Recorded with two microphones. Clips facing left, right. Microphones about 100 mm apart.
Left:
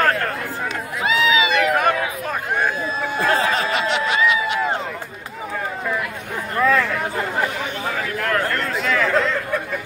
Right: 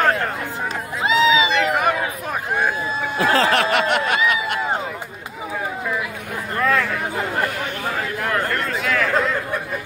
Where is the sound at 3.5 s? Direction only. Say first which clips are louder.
Right 3 dB; 60° right (ahead or behind).